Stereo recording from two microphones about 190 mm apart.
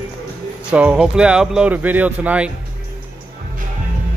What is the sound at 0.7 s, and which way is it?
Speech, 5° right (ahead or behind).